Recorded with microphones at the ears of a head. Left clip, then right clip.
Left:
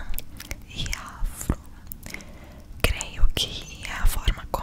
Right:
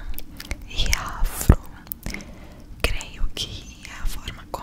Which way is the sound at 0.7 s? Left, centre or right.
Right.